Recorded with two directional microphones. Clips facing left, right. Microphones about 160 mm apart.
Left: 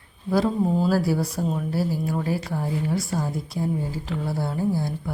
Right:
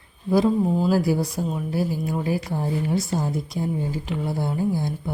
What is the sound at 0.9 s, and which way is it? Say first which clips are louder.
Speech: right 1 dB; 15° right (ahead or behind).